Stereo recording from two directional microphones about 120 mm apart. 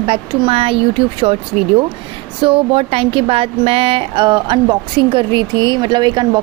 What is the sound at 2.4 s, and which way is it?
A woman's voice, 50° right (ahead or behind).